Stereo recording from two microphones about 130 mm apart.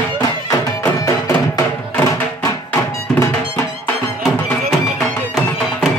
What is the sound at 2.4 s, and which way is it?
Music, 20° left (ahead or behind).